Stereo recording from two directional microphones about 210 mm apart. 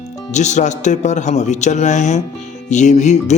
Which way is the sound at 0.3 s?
35° left (ahead or behind).